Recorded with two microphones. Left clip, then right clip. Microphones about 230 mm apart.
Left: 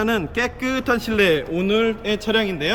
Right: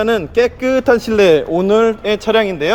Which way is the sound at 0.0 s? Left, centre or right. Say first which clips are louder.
Right 8 dB; centre.